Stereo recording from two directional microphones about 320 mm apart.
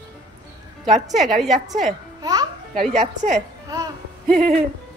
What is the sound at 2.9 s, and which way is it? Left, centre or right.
Speech, right.